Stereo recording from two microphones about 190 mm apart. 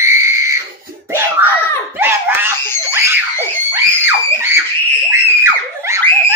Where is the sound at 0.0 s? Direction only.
15° right (ahead or behind).